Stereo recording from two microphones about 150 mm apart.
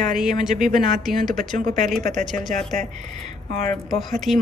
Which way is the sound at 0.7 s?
60° right (ahead or behind).